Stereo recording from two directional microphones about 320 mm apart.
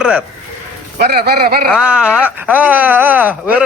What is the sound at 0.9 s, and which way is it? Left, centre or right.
Speech, right.